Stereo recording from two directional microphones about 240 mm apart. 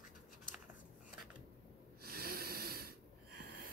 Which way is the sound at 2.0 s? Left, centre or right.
Right.